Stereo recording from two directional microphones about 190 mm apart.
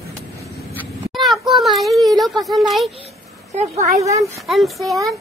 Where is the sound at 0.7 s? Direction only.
5° left (ahead or behind).